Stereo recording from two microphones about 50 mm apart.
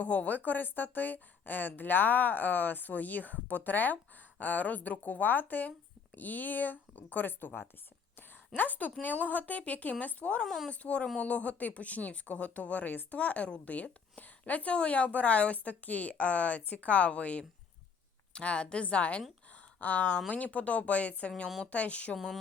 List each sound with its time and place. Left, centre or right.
0.0 s speech: left
10.4 s speech: centre
10.7 s speech: left
22.1 s speech: centre